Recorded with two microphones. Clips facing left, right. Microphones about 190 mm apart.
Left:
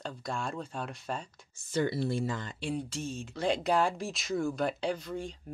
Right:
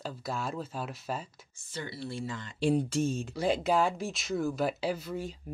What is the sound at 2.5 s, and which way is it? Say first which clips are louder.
Speech: right 8 dB; 40° right (ahead or behind).